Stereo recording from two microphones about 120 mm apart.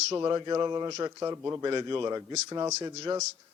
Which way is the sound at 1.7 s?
35° right (ahead or behind).